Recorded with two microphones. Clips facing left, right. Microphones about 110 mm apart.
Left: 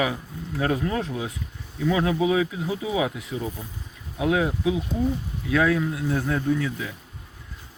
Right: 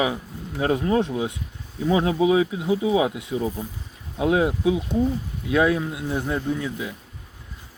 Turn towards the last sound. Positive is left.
turn(degrees=-10)  # may be behind; listen again after turning